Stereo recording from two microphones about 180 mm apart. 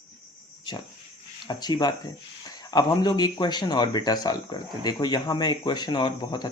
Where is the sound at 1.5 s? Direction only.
25° left (ahead or behind).